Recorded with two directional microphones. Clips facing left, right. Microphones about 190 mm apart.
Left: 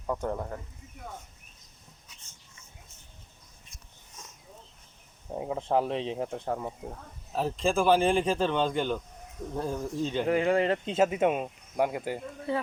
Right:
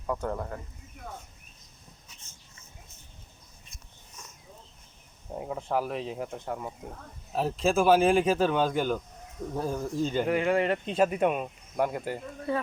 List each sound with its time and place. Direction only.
0.1 s speech: 20° left (ahead or behind)
5.4 s speech: 25° left (ahead or behind)
7.3 s speech: 5° right (ahead or behind)
10.2 s speech: 30° left (ahead or behind); by 12.2 s 10° left (ahead or behind)